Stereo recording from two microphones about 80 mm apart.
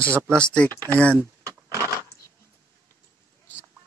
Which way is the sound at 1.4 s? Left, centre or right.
Right.